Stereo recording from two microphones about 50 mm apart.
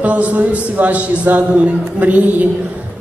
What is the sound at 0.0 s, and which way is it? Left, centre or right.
A man's voice, right.